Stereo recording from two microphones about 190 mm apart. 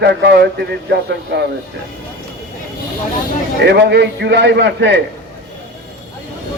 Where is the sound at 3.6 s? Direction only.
65° right (ahead or behind).